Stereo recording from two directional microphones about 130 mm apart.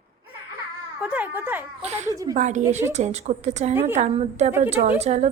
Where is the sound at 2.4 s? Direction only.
65° right (ahead or behind).